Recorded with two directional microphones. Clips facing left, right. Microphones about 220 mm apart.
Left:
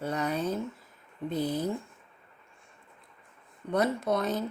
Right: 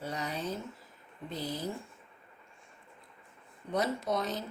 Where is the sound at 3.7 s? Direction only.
55° left (ahead or behind).